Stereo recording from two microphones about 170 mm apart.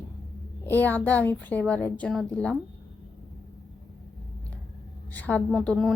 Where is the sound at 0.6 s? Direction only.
10° left (ahead or behind).